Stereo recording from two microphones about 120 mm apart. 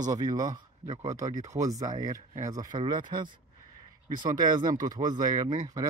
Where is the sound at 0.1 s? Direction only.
30° right (ahead or behind).